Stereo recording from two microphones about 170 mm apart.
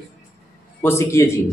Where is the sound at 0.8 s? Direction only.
15° left (ahead or behind).